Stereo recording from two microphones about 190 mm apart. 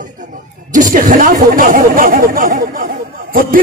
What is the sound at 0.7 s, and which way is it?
Speech, 45° right (ahead or behind).